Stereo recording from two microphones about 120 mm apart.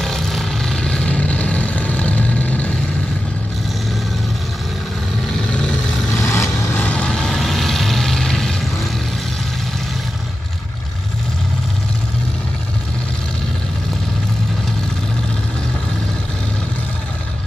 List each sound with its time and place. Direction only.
0.0 s vehicle: 5° left (ahead or behind)
5.5 s vehicle: 5° left (ahead or behind)
6.1 s vehicle: 25° left (ahead or behind)
6.8 s vehicle: 10° left (ahead or behind)